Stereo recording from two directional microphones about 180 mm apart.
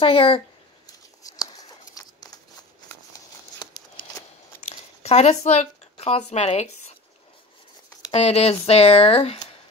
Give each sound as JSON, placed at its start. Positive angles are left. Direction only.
{"t": 0.0, "sound": "speech", "side_deg": 30}
{"t": 1.2, "sound": "a sound", "side_deg": 20}
{"t": 4.6, "sound": "speech", "side_deg": 35}
{"t": 8.1, "sound": "speech", "side_deg": 35}